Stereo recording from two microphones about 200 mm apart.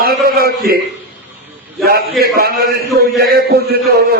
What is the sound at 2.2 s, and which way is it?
A man's voice, 50° right (ahead or behind).